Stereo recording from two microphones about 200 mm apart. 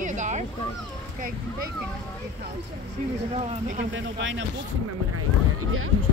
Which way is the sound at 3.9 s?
70° right (ahead or behind).